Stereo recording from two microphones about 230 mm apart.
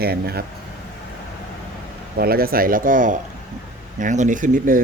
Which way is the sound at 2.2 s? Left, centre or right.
Right.